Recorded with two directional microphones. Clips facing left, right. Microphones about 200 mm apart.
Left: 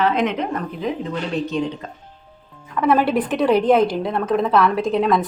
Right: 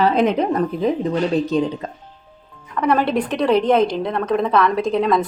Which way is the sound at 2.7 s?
5° left (ahead or behind).